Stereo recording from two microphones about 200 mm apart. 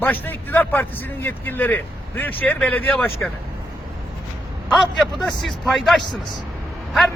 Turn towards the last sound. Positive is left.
turn(degrees=0)  # may be behind; listen again after turning